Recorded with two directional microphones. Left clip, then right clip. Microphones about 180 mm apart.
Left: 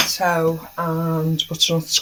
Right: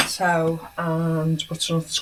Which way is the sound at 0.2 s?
30° left (ahead or behind).